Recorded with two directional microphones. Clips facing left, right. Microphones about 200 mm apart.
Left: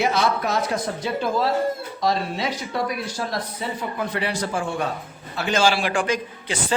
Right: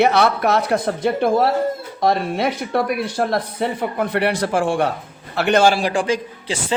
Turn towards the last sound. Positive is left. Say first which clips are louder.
# right 3 dB
turn(degrees=-30)  # may be behind; listen again after turning